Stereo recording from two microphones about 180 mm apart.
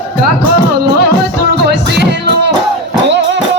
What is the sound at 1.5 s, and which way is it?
Music, 70° right (ahead or behind).